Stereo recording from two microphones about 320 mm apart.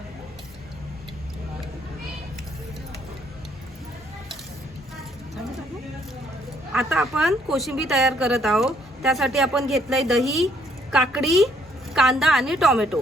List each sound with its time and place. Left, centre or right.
6.7 s a woman's voice: centre